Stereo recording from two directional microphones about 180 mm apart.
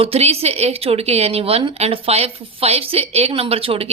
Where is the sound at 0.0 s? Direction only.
35° right (ahead or behind).